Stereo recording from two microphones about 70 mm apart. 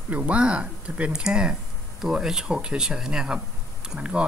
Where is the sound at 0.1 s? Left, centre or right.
Centre.